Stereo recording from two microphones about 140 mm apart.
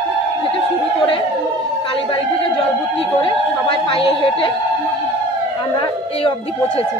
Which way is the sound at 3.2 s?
40° left (ahead or behind).